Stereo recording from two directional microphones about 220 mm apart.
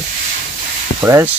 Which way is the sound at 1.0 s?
10° right (ahead or behind).